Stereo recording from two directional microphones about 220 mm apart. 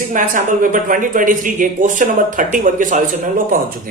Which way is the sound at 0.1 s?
35° right (ahead or behind).